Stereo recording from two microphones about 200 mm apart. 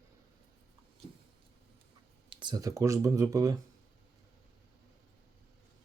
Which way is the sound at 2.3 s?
20° right (ahead or behind).